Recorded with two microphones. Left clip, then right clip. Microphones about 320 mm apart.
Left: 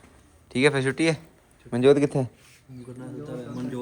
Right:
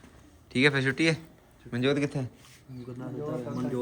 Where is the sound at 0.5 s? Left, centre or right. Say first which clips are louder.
Left 3 dB; centre.